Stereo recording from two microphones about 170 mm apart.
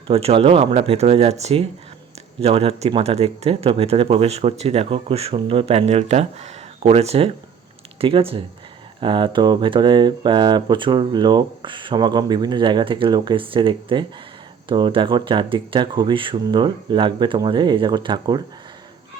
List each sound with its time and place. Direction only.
0.1 s speech: 35° right (ahead or behind)